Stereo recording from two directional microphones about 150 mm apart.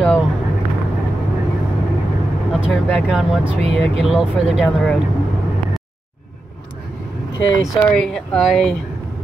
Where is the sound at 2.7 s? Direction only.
Centre (ahead or behind).